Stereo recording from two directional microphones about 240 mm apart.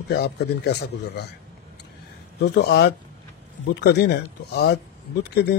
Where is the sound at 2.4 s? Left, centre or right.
Left.